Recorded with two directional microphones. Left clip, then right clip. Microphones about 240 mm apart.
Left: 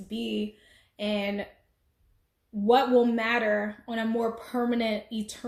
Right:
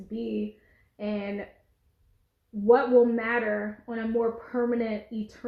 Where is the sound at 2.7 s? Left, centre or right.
Left.